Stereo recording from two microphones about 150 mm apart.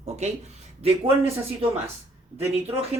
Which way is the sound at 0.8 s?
40° right (ahead or behind).